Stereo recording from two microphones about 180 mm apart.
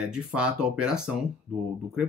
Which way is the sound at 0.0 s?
5° right (ahead or behind).